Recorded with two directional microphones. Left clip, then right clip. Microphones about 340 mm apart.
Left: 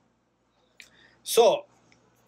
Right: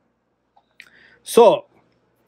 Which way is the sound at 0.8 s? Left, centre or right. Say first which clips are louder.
Right 5 dB; centre.